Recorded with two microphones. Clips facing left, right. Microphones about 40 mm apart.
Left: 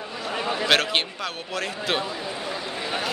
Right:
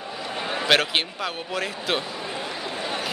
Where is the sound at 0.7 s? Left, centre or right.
Centre.